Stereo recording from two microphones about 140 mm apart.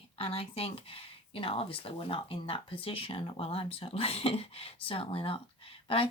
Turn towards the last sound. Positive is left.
turn(degrees=40)  # may be behind; listen again after turning